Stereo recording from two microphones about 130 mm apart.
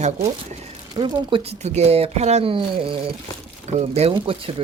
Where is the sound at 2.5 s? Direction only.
45° right (ahead or behind).